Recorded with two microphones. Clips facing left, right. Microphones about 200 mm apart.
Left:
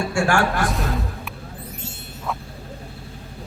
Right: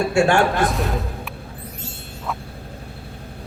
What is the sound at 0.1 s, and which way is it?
Speech, 20° right (ahead or behind).